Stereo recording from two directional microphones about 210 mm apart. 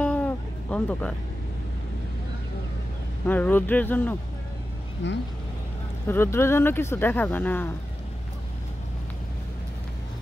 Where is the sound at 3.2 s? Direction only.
10° left (ahead or behind).